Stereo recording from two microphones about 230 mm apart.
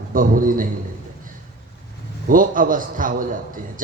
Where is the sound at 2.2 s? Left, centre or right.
Right.